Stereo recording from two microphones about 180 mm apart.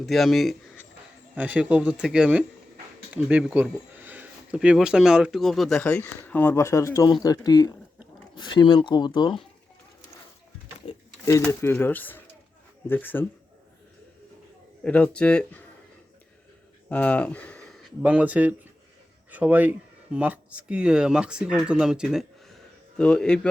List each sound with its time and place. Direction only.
0.0 s speech: centre (ahead or behind); by 9.4 s 25° left (ahead or behind)
11.3 s speech: 15° left (ahead or behind)
14.8 s speech: 5° left (ahead or behind)
16.9 s speech: 10° left (ahead or behind)
18.0 s speech: 10° right (ahead or behind)